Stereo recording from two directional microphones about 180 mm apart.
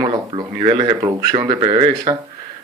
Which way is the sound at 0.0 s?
25° right (ahead or behind).